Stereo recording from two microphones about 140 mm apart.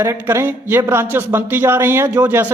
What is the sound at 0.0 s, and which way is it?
A man's voice, 20° right (ahead or behind).